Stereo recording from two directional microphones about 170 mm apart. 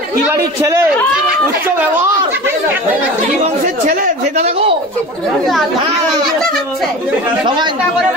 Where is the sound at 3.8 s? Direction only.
50° right (ahead or behind).